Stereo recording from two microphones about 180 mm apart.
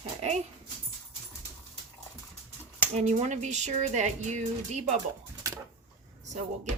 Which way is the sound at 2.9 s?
40° right (ahead or behind).